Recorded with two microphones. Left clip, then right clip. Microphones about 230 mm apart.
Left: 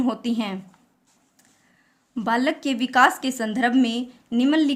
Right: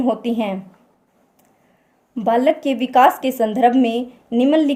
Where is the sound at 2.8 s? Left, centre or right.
Left.